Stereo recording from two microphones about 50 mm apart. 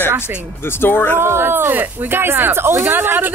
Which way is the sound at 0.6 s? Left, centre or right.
Left.